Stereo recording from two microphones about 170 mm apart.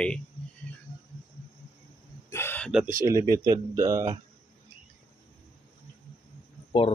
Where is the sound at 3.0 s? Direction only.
20° right (ahead or behind).